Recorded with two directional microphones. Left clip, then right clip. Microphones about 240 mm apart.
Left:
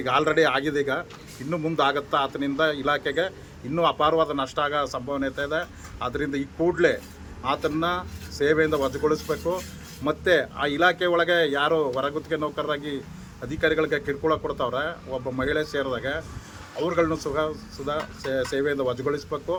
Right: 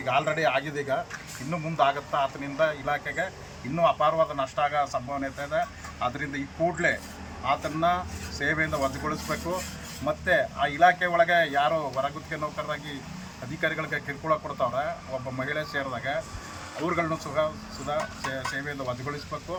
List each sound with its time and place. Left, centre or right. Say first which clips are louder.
0.0 s speech: left 4 dB; left